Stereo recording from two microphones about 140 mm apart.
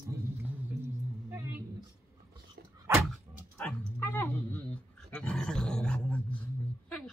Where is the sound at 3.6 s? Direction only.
15° left (ahead or behind).